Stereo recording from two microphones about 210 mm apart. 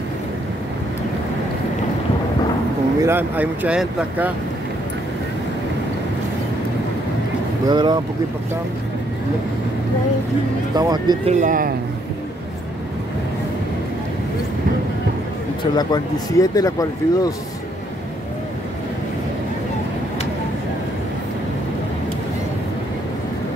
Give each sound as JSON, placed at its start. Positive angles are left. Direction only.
{"t": 3.0, "sound": "speech", "side_deg": -10}
{"t": 7.7, "sound": "speech", "side_deg": -20}
{"t": 10.8, "sound": "speech", "side_deg": -20}
{"t": 11.3, "sound": "speech", "side_deg": -40}
{"t": 15.7, "sound": "speech", "side_deg": 20}